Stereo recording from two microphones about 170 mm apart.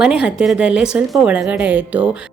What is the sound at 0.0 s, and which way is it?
A woman's voice, 5° right (ahead or behind).